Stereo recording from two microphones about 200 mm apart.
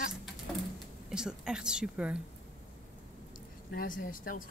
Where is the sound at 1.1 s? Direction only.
5° right (ahead or behind).